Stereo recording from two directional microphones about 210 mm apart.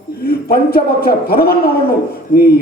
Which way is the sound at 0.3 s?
45° left (ahead or behind).